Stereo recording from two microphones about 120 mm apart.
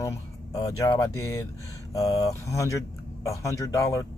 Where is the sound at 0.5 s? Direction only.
30° left (ahead or behind).